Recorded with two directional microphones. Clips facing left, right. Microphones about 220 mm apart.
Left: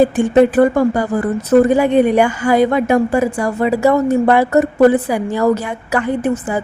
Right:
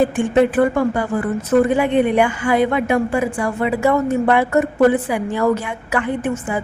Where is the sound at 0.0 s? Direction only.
40° left (ahead or behind).